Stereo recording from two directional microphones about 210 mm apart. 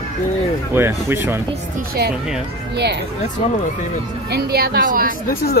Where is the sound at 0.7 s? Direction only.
10° right (ahead or behind).